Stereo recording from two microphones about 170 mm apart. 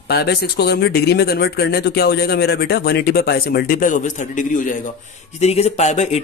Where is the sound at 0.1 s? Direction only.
70° left (ahead or behind); by 4.7 s 50° left (ahead or behind).